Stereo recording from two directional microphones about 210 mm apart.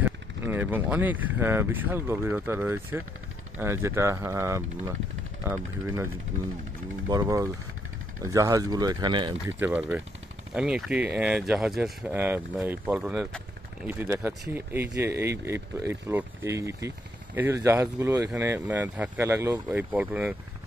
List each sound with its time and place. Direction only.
0.0 s speech: 10° right (ahead or behind)
7.1 s speech: 15° right (ahead or behind)
9.6 s speech: 10° right (ahead or behind)